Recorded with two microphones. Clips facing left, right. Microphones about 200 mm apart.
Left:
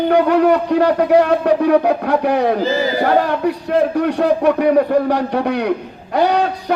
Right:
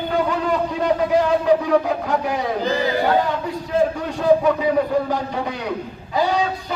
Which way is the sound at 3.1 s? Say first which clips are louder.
Left 5 dB; 65° left (ahead or behind).